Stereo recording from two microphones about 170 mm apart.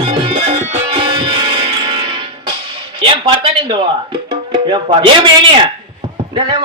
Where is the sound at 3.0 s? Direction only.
30° right (ahead or behind).